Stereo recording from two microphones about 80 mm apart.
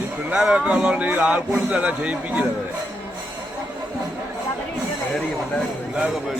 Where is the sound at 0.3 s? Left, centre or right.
Centre.